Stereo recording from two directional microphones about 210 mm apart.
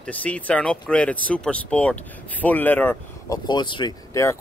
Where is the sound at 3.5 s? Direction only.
20° left (ahead or behind).